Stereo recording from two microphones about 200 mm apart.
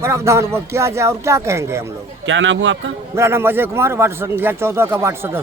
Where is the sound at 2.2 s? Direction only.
70° right (ahead or behind).